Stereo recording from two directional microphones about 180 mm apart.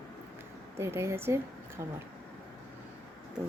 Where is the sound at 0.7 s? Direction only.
15° right (ahead or behind).